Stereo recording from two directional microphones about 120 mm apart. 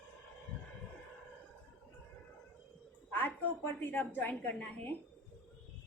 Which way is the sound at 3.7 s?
15° left (ahead or behind).